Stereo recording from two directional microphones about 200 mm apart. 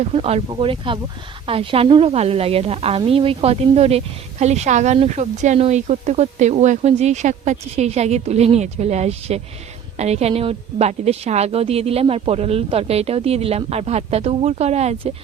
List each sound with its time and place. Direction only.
0.0 s a woman's voice: 30° right (ahead or behind)